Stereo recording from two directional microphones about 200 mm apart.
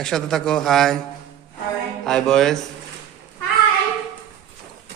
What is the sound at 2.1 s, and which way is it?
Speech, centre (ahead or behind).